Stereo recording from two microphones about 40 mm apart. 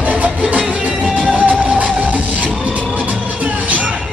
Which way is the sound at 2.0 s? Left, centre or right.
Right.